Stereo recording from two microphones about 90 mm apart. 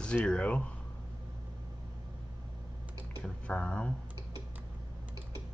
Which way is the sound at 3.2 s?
15° left (ahead or behind).